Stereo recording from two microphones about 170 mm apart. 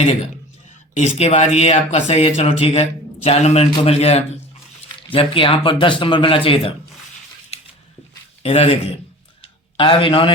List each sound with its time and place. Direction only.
0.9 s speech: 40° left (ahead or behind)
8.4 s speech: 35° left (ahead or behind)
9.4 s a sound: 30° left (ahead or behind)